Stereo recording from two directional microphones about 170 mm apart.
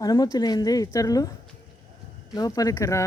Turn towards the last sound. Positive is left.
turn(degrees=20)  # may be behind; listen again after turning